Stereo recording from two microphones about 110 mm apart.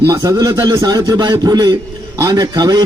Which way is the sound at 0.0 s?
30° right (ahead or behind).